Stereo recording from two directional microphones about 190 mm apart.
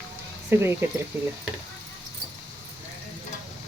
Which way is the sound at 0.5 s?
10° right (ahead or behind).